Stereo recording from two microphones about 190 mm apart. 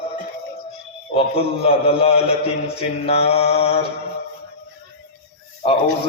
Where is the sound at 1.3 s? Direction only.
30° left (ahead or behind).